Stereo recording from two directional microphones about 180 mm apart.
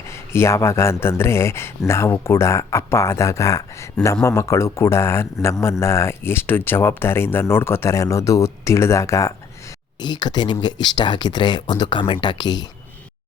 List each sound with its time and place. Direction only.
0.3 s speech: 15° left (ahead or behind)